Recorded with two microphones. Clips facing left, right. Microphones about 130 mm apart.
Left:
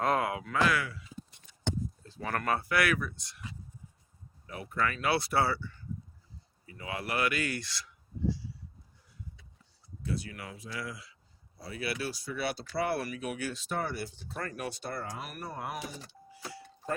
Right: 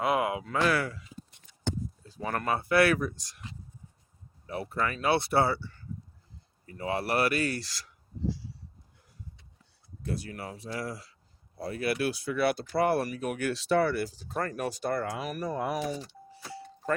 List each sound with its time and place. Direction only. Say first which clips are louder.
0.0 s a sound: right 2 dB; 15° right (ahead or behind)
0.4 s speech: right 2 dB; 35° right (ahead or behind)
2.0 s speech: right 2 dB; 15° right (ahead or behind); by 3.4 s 40° right (ahead or behind)
4.4 s speech: right 2 dB; 35° right (ahead or behind)
10.0 s speech: right 2 dB; 45° right (ahead or behind)
11.5 s speech: right 6 dB; 50° right (ahead or behind)
13.5 s speech: right 9 dB; 85° right
14.2 s speech: right 6 dB; 45° right (ahead or behind)
15.1 s speech: right 7 dB; 90° right